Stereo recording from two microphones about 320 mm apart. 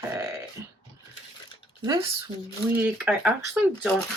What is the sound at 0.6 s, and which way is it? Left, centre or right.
Speech, centre.